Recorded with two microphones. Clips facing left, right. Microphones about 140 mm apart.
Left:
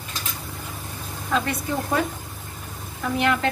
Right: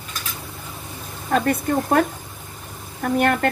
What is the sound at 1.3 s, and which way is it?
Speech, 55° right (ahead or behind).